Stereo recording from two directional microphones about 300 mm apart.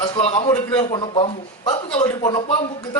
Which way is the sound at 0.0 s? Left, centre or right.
Centre.